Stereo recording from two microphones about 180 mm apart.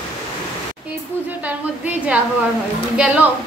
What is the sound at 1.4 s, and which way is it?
A woman's voice, 10° right (ahead or behind).